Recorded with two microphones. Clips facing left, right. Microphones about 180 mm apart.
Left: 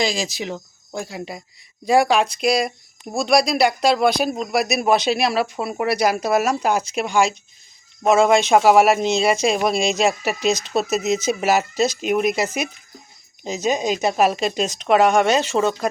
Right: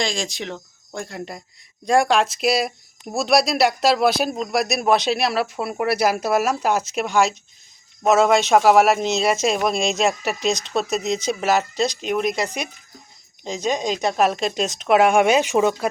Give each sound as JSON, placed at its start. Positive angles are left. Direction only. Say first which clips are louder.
{"t": 0.0, "sound": "speech", "louder": "left 3 dB", "side_deg": 5}